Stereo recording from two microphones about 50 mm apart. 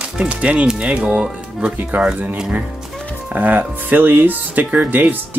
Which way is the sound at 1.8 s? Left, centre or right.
Right.